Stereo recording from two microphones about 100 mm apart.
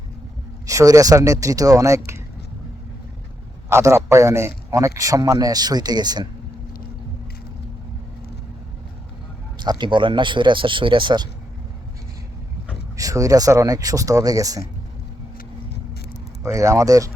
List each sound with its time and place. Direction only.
0.7 s a man's voice: 35° right (ahead or behind)
3.7 s a man's voice: 30° right (ahead or behind); by 6.2 s 45° right (ahead or behind)
9.6 s speech: 50° right (ahead or behind)
13.0 s a man's voice: 35° right (ahead or behind)
16.4 s a man's voice: 30° right (ahead or behind)